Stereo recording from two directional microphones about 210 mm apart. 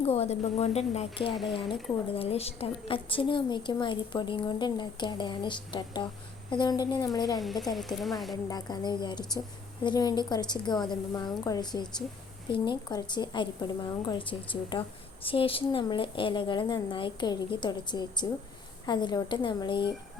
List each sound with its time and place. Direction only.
0.0 s a woman's voice: 30° left (ahead or behind)
7.3 s speech: centre (ahead or behind)
8.4 s a woman's voice: 20° left (ahead or behind)